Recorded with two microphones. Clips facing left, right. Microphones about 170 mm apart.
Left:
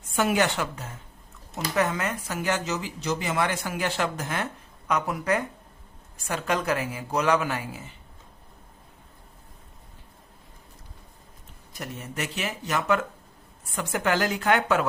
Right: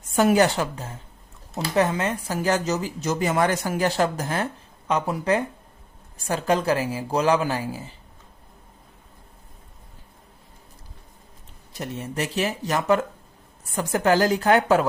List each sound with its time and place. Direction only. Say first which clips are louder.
0.2 s speech: right 5 dB; 40° right (ahead or behind)
11.8 s speech: right 5 dB; 30° right (ahead or behind)